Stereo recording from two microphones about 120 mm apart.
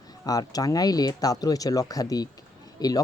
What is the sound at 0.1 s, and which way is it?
Speech, 30° left (ahead or behind).